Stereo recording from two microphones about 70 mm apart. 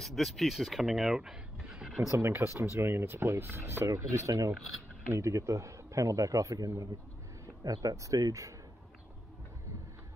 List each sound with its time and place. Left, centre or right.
0.0 s speech: centre
2.0 s speech: right